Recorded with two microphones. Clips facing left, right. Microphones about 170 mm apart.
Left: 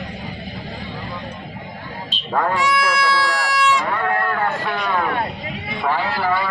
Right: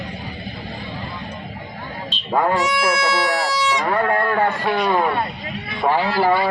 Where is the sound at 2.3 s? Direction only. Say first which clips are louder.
Right 1 dB; 15° right (ahead or behind).